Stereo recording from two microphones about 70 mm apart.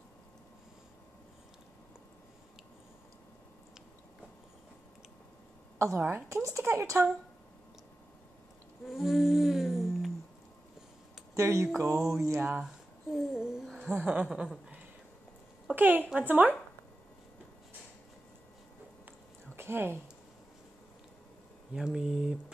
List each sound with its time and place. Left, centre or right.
5.9 s speech: right
6.2 s speech: right
8.8 s humming: centre
11.3 s speech: right
11.9 s music: centre
12.4 s a woman's voice: right
12.6 s a sound: centre
13.9 s a woman's voice: centre
15.7 s a woman's voice: right
19.5 s speech: right
21.7 s speech: centre